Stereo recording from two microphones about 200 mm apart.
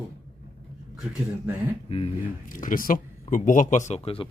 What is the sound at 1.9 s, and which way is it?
Speech, 30° left (ahead or behind).